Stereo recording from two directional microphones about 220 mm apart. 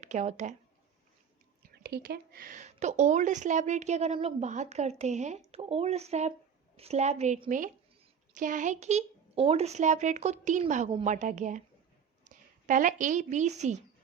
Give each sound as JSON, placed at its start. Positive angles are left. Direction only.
{"t": 0.0, "sound": "speech", "side_deg": -30}
{"t": 1.8, "sound": "a woman's voice", "side_deg": -45}